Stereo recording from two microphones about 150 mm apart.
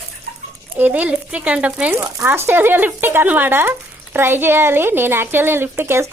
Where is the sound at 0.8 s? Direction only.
10° right (ahead or behind).